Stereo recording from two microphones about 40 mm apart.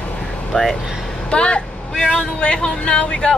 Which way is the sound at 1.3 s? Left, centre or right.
Left.